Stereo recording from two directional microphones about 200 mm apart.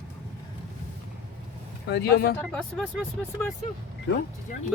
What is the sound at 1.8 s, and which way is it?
Speech, 55° left (ahead or behind).